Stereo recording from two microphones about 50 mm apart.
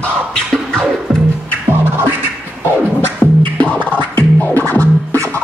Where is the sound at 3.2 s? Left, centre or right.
Left.